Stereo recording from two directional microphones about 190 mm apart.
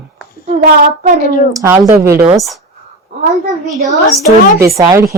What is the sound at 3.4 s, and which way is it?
Speech, 40° right (ahead or behind).